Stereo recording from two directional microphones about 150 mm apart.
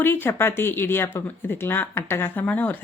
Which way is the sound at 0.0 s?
15° left (ahead or behind).